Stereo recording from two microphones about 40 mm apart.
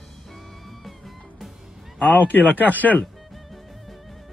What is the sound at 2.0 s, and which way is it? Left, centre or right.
Speech, left.